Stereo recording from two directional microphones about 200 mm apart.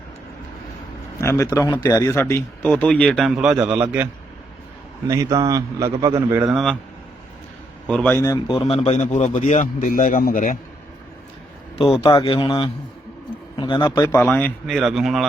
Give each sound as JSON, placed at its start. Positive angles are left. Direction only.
{"t": 1.2, "sound": "a man's voice", "side_deg": 15}
{"t": 6.5, "sound": "speech", "side_deg": 0}
{"t": 7.9, "sound": "a man's voice", "side_deg": 5}
{"t": 11.9, "sound": "speech", "side_deg": 25}
{"t": 14.0, "sound": "speech", "side_deg": 10}